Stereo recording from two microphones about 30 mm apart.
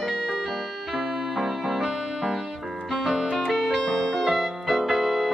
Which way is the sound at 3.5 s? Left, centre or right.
Centre.